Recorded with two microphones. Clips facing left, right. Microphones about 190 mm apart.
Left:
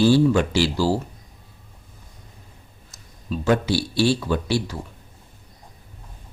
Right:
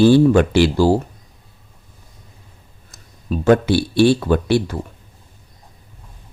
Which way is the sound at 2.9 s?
55° right (ahead or behind).